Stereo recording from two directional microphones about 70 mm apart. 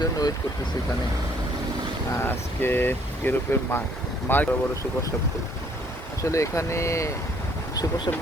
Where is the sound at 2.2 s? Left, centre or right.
Left.